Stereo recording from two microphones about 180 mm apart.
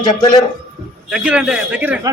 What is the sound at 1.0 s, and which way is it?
Speech, 5° right (ahead or behind).